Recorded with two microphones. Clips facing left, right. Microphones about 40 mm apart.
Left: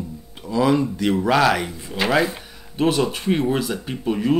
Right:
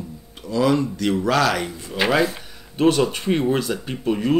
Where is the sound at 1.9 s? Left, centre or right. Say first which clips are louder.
Even; centre.